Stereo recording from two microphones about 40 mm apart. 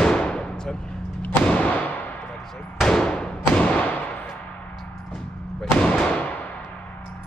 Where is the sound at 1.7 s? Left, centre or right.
Left.